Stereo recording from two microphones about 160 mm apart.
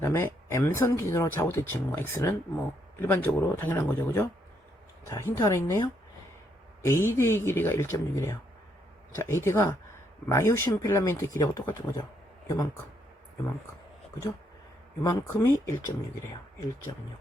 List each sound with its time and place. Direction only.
0.0 s speech: 15° left (ahead or behind)
15.0 s speech: 20° left (ahead or behind)